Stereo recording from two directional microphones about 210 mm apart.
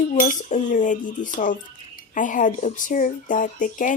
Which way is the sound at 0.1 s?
35° left (ahead or behind).